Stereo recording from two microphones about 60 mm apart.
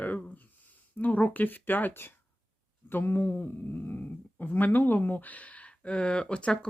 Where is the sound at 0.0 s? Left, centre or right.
Left.